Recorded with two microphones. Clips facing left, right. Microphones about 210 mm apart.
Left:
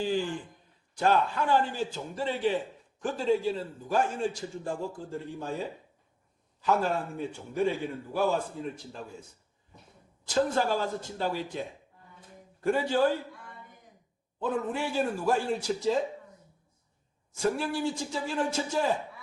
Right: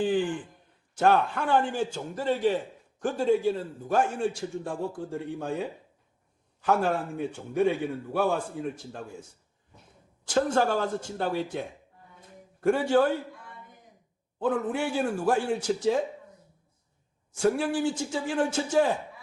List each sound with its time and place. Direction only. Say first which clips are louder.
0.9 s a man's voice: right 2 dB; 65° right (ahead or behind)
2.1 s a man's voice: right 3 dB; 45° right (ahead or behind)
3.1 s a man's voice: right 3 dB; 60° right (ahead or behind)
6.7 s a man's voice: right 2 dB; 60° right (ahead or behind)
10.2 s a man's voice: right 2 dB; 70° right (ahead or behind)
10.6 s a man's voice: right 3 dB; 50° right (ahead or behind)
12.6 s a man's voice: right 3 dB; 65° right (ahead or behind)
14.3 s a man's voice: right 3 dB; 65° right (ahead or behind)
17.6 s a man's voice: right 3 dB; 75° right (ahead or behind)